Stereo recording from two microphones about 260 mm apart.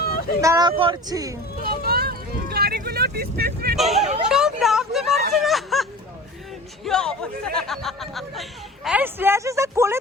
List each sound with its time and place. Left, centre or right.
0.4 s speech: centre
1.6 s vehicle: right
3.8 s speech: centre
4.0 s speech: right
4.3 s a sound: centre
5.3 s snicker: centre
6.8 s speech: centre